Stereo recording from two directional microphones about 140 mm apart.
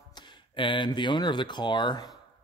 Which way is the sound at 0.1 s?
35° left (ahead or behind).